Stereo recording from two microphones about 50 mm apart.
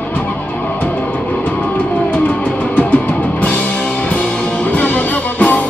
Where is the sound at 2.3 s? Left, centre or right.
Left.